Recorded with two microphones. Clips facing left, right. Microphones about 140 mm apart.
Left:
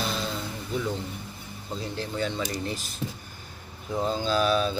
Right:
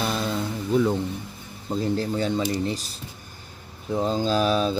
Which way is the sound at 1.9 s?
35° right (ahead or behind).